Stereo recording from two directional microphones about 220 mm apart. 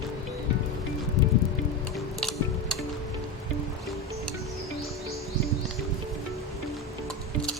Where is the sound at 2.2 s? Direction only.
Centre (ahead or behind).